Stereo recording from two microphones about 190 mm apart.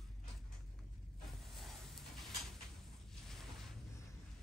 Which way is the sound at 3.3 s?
Centre (ahead or behind).